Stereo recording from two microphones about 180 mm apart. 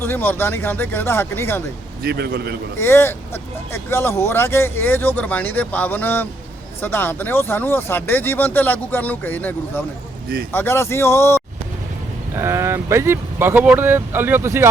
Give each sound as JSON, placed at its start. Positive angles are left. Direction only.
{"t": 0.0, "sound": "speech", "side_deg": 10}
{"t": 2.0, "sound": "a man's voice", "side_deg": -60}
{"t": 2.7, "sound": "speech", "side_deg": 15}
{"t": 12.3, "sound": "speech", "side_deg": -15}